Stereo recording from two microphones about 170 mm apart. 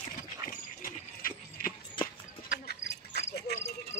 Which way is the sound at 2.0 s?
30° left (ahead or behind).